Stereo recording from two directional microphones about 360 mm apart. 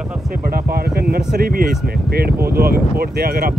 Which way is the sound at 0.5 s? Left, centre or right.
Right.